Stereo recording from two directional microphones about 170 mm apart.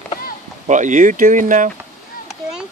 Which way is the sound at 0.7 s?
45° right (ahead or behind).